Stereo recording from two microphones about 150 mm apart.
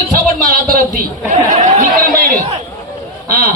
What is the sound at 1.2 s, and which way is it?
Speech, 55° right (ahead or behind).